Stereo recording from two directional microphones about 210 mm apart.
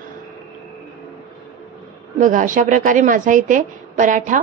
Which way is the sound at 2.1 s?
40° right (ahead or behind).